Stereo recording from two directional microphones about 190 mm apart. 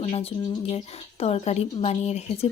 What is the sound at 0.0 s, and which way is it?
Speech, 30° left (ahead or behind).